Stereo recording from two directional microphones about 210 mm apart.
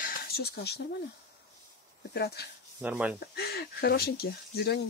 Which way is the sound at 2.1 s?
50° left (ahead or behind).